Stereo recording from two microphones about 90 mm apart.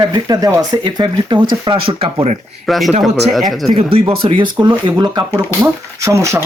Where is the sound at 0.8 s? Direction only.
60° right (ahead or behind); by 2.1 s 75° right (ahead or behind).